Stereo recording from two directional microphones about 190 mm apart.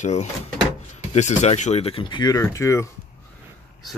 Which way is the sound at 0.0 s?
35° left (ahead or behind).